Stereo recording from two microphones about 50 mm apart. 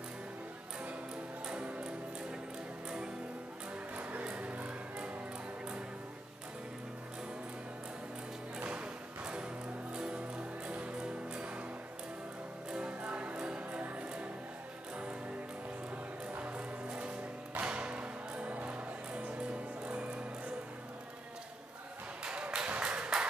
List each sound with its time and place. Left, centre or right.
1.5 s music: right
3.9 s music: right
8.5 s music: right
12.7 s music: right
16.3 s music: right
22.2 s a sound: centre